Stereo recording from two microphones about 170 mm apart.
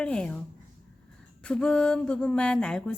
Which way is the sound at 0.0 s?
5° left (ahead or behind).